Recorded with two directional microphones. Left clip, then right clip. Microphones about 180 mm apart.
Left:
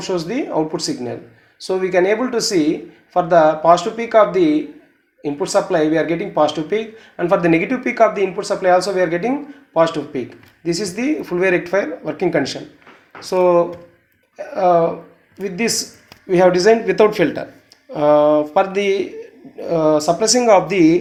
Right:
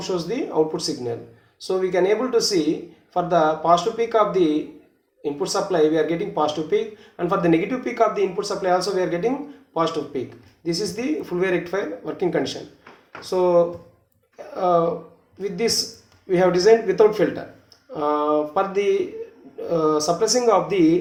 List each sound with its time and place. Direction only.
0.0 s speech: 30° left (ahead or behind)